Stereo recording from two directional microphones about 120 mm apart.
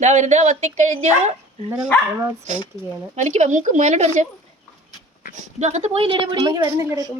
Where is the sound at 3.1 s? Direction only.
80° right.